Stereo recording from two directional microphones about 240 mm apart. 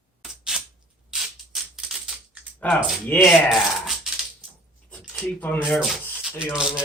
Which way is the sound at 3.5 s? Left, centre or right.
Centre.